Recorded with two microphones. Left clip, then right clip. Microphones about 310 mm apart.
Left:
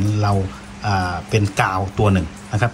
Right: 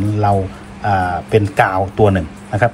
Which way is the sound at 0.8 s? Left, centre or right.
Centre.